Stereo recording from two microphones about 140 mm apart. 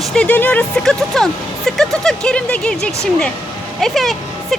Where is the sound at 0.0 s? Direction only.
5° left (ahead or behind).